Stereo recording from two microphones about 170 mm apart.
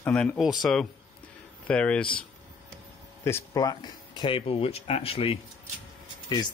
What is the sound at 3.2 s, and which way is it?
Speech, 20° left (ahead or behind).